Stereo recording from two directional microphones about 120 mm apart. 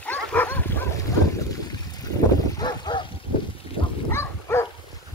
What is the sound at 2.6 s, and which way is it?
Bow-wow, 35° left (ahead or behind).